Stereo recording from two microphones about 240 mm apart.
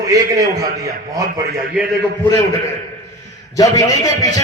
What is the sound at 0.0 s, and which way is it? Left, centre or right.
A man's voice, centre.